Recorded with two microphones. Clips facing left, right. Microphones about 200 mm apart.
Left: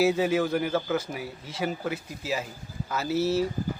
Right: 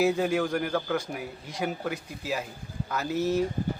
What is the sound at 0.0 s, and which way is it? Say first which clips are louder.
Speech: left 1 dB; 5° left (ahead or behind).